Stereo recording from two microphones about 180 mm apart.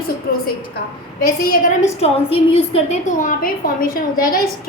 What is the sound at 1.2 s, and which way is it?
Speech, 55° left (ahead or behind).